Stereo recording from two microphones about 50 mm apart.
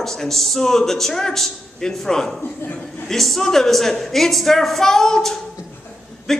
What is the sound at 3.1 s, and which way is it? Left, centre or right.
A woman's voice, centre.